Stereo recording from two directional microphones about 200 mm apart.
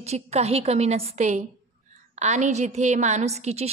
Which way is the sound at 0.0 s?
30° right (ahead or behind).